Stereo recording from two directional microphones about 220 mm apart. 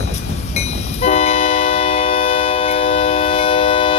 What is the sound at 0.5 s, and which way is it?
Train, 30° left (ahead or behind).